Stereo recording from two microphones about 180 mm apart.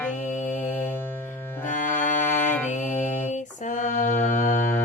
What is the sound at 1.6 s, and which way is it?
Music, 45° left (ahead or behind).